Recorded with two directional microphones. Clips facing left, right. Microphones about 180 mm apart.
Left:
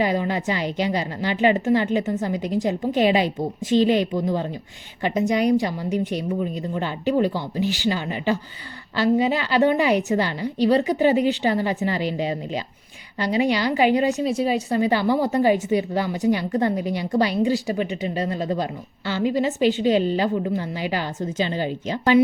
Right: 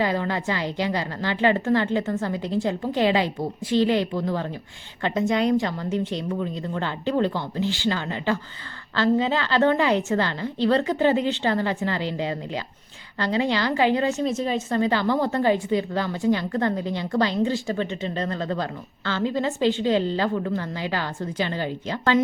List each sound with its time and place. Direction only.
0.0 s a woman's voice: 15° left (ahead or behind)